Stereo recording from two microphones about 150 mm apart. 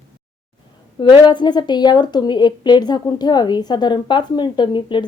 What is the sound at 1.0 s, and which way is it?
A woman's voice, 30° left (ahead or behind).